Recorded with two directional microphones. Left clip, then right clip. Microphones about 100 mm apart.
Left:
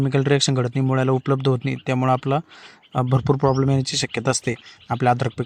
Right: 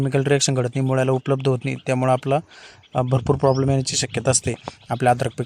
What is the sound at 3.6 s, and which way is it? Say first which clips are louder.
Speech: even; 20° right (ahead or behind).